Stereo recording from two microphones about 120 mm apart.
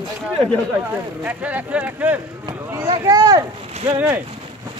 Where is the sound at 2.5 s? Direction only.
35° right (ahead or behind).